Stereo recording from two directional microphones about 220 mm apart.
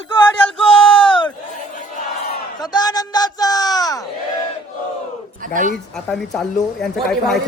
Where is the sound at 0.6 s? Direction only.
25° left (ahead or behind).